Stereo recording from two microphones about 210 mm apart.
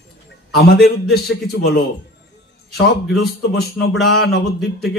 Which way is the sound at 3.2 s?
50° left (ahead or behind).